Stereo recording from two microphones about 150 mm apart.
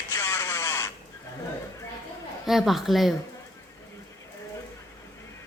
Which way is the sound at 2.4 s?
Centre (ahead or behind).